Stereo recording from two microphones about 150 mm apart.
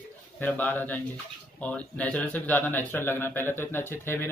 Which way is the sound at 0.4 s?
10° left (ahead or behind).